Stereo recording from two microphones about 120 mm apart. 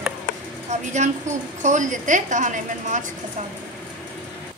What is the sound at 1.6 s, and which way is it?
A woman's voice, 90° right.